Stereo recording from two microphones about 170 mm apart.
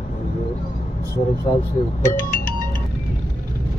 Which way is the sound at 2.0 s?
15° left (ahead or behind).